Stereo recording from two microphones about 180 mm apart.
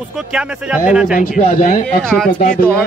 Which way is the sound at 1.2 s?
45° left (ahead or behind).